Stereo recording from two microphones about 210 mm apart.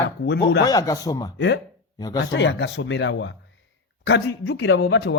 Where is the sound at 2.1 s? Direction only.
60° left (ahead or behind).